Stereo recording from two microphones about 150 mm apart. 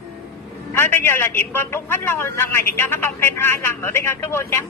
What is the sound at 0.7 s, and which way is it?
Speech, 15° left (ahead or behind).